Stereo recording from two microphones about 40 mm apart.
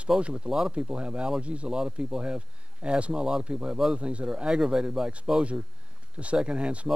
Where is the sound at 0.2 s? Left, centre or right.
Right.